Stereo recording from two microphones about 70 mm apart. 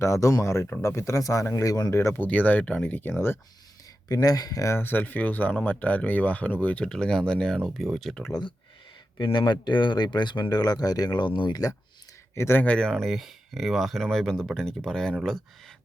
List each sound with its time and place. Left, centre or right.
0.0 s speech: left
2.1 s speech: left
4.1 s speech: left
4.7 s speech: left
6.8 s speech: centre
9.1 s speech: left
12.3 s speech: left
12.6 s speech: centre
13.0 s speech: centre